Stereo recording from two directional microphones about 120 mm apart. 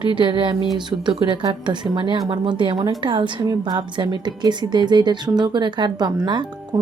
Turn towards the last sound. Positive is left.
turn(degrees=-35)  # may be behind; listen again after turning